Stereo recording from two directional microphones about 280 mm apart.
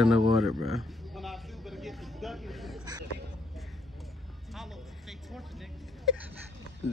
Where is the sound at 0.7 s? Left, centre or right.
Centre.